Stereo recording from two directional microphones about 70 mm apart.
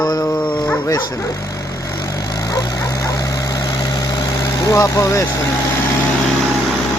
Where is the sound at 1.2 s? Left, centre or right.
Left.